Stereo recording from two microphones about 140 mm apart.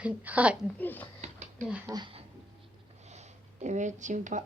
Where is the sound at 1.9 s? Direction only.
30° right (ahead or behind).